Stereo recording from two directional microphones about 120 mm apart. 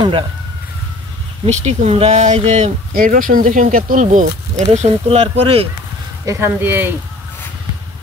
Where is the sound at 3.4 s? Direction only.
90° right; by 5.6 s 55° right (ahead or behind).